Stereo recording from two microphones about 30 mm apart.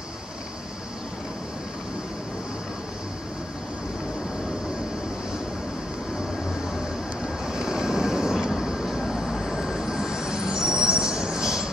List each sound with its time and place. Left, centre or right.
7.4 s vehicle: right
8.8 s vehicle: centre
9.8 s train: centre